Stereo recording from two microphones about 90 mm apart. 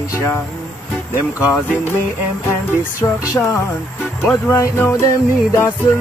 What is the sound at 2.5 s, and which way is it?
Music, 30° left (ahead or behind).